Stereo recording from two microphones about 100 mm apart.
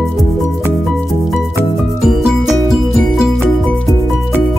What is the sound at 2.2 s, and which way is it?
Music, 5° right (ahead or behind).